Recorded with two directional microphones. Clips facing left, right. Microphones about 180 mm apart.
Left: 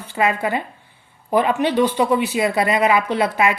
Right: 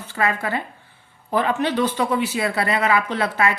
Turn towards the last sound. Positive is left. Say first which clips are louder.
# left 3 dB
turn(degrees=15)  # may be behind; listen again after turning